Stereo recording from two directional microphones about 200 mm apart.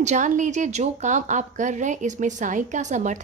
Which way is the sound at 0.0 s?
35° right (ahead or behind).